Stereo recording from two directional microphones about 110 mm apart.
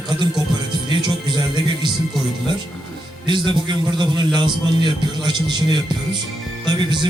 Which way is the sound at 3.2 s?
45° right (ahead or behind).